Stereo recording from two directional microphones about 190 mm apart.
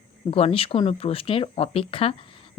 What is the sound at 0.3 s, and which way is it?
Speech, 30° left (ahead or behind).